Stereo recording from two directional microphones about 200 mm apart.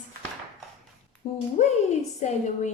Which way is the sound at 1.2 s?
30° left (ahead or behind).